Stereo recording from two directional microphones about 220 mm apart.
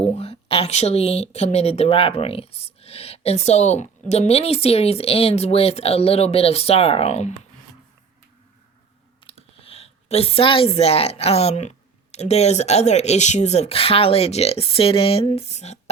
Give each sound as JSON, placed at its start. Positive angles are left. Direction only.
{"t": 0.0, "sound": "a woman's voice", "side_deg": 30}
{"t": 9.2, "sound": "a woman's voice", "side_deg": 25}